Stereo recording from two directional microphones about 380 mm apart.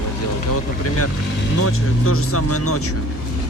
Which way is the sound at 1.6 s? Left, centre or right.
Left.